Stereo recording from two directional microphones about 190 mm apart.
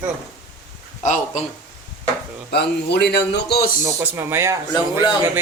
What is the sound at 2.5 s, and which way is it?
A man's voice, 60° left (ahead or behind).